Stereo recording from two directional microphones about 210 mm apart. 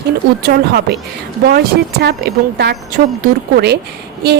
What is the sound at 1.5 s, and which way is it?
A woman's voice, 50° right (ahead or behind).